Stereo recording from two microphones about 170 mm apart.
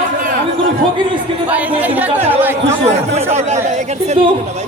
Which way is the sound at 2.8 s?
40° right (ahead or behind).